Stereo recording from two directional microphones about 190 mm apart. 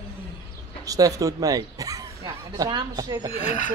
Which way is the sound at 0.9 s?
20° right (ahead or behind).